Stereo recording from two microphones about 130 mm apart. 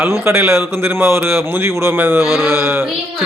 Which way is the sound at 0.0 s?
20° right (ahead or behind).